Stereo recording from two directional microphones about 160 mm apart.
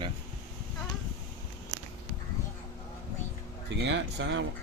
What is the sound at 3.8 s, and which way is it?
Speech, 90° right.